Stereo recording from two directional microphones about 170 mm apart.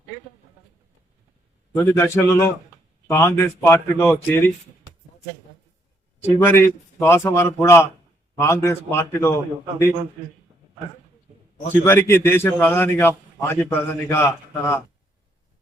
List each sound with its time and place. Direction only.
1.7 s a man's voice: 15° left (ahead or behind)
6.2 s a man's voice: 10° left (ahead or behind)
11.7 s a man's voice: 15° left (ahead or behind)